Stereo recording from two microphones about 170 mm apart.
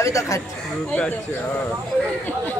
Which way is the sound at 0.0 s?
20° left (ahead or behind).